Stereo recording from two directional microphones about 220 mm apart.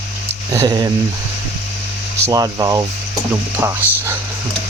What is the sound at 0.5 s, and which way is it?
Speech, 15° right (ahead or behind).